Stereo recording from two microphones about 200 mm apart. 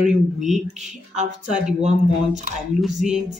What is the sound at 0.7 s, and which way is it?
Speech, 35° right (ahead or behind).